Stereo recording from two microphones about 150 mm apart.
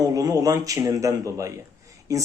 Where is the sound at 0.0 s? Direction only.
25° right (ahead or behind).